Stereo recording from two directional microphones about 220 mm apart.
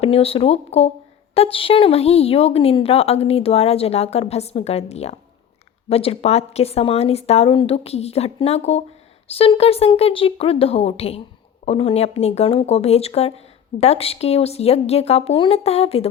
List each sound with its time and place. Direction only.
0.0 s speech: 25° left (ahead or behind)